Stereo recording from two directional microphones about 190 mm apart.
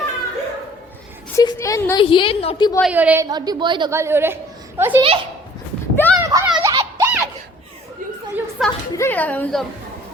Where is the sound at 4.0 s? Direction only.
10° right (ahead or behind).